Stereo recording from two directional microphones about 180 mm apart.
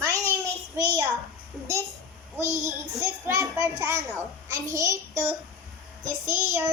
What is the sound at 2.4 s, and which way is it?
Speech, 40° right (ahead or behind).